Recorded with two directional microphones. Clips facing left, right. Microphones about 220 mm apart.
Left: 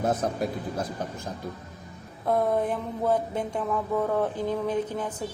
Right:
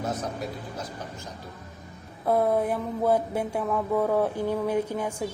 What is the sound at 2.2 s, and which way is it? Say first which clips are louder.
Mantra: right 1 dB; 5° right (ahead or behind).